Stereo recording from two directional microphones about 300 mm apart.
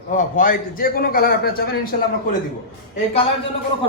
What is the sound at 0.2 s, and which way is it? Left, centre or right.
A man's voice, left.